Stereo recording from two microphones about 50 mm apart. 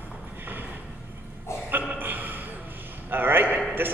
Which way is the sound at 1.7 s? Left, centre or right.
Right.